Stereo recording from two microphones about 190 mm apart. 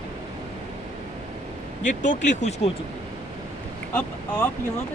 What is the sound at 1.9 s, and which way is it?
Speech, 40° left (ahead or behind).